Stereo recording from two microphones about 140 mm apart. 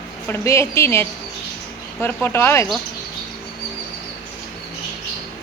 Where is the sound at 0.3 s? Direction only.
20° left (ahead or behind).